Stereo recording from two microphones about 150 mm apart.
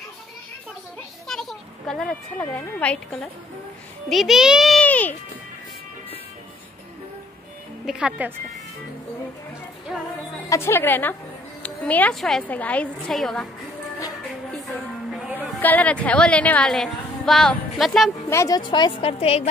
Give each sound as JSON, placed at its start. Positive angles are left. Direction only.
{"t": 1.2, "sound": "a sound", "side_deg": 5}
{"t": 2.5, "sound": "a woman's voice", "side_deg": 10}
{"t": 4.8, "sound": "a child's voice", "side_deg": 10}
{"t": 7.8, "sound": "a child's voice", "side_deg": -5}
{"t": 10.5, "sound": "a woman's voice", "side_deg": 15}
{"t": 14.5, "sound": "music", "side_deg": 0}
{"t": 15.6, "sound": "a woman's voice", "side_deg": 10}
{"t": 18.3, "sound": "a woman's voice", "side_deg": 20}
{"t": 18.7, "sound": "a woman's voice", "side_deg": 30}